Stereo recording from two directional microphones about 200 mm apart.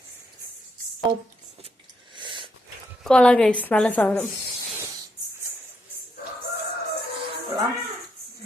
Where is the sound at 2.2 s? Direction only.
25° right (ahead or behind).